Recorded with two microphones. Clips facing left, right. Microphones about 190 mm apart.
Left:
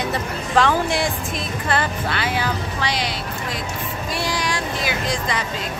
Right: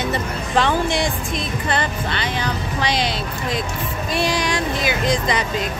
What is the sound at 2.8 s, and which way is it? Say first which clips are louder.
Speech: right 3 dB; 20° right (ahead or behind).